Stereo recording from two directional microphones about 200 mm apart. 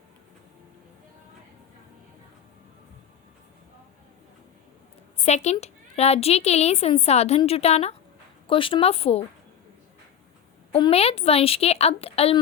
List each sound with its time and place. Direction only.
5.2 s a woman's voice: 35° left (ahead or behind)
10.7 s a woman's voice: 25° left (ahead or behind)